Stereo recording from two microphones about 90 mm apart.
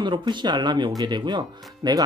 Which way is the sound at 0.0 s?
60° right (ahead or behind).